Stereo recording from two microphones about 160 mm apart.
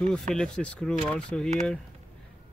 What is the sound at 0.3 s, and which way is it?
Speech, 5° left (ahead or behind).